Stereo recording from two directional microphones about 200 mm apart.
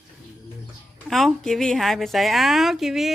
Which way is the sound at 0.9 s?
Centre (ahead or behind).